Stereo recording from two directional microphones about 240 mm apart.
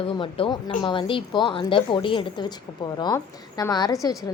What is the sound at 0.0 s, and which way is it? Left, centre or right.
A woman's voice, left.